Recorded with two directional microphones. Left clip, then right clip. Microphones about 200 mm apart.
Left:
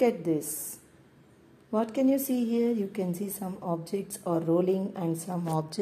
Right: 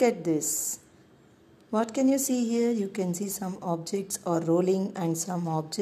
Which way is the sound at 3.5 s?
20° right (ahead or behind).